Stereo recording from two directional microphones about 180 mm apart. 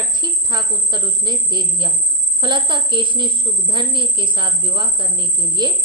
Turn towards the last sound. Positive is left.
turn(degrees=-25)  # may be behind; listen again after turning